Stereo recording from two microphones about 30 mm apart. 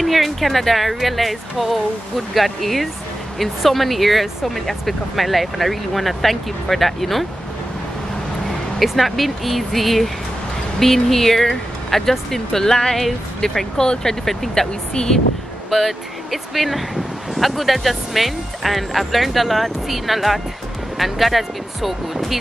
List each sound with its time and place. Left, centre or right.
0.0 s speech: centre
8.5 s speech: centre; by 15.1 s left
15.7 s speech: centre